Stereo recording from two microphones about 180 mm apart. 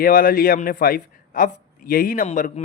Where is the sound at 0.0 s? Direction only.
50° left (ahead or behind).